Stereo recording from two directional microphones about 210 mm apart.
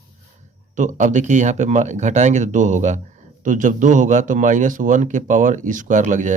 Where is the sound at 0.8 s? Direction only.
35° right (ahead or behind).